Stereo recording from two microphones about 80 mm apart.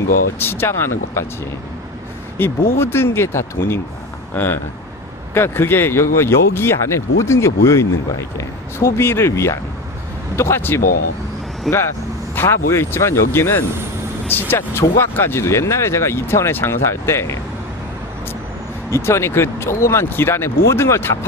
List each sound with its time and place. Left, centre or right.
0.4 s speech: left
2.3 s speech: left
11.7 s speech: centre
12.4 s speech: left
18.9 s speech: left